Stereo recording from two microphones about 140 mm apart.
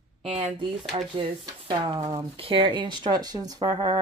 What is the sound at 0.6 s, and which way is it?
Speech, 40° right (ahead or behind).